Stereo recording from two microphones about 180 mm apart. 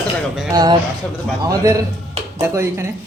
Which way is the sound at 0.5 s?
20° right (ahead or behind).